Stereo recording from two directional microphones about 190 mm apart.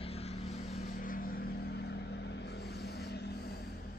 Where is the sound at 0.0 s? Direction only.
35° left (ahead or behind); by 3.6 s 55° left (ahead or behind).